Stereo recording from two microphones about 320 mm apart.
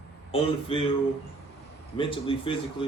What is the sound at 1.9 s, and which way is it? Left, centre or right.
Speech, centre.